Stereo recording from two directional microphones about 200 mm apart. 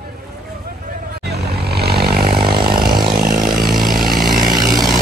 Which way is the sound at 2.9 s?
20° right (ahead or behind).